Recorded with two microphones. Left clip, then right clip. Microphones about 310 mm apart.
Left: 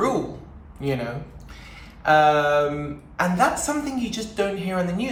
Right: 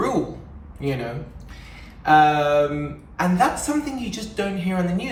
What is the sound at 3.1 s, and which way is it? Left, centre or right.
A woman's voice, centre.